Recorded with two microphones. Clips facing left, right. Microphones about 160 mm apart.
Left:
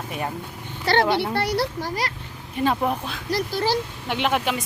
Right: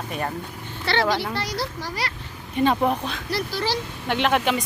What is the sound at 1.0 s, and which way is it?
Speech, 25° left (ahead or behind).